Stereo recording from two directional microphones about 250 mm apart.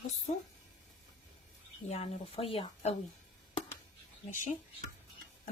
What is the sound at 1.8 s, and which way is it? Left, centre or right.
Speech, left.